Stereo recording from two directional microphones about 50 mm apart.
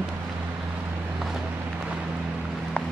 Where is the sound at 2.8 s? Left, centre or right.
Left.